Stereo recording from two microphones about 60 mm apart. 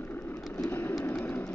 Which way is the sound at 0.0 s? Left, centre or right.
Left.